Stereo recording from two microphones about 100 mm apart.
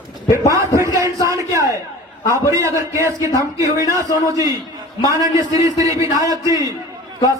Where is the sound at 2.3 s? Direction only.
30° right (ahead or behind).